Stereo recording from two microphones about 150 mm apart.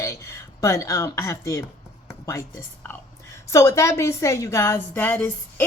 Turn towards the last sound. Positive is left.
turn(degrees=15)  # may be behind; listen again after turning